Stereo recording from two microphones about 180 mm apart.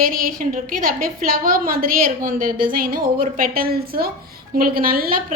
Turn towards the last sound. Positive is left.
turn(degrees=-55)  # may be behind; listen again after turning